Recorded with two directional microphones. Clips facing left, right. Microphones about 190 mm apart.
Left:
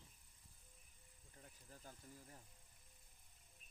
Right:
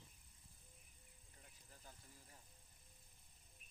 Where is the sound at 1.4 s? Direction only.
45° left (ahead or behind).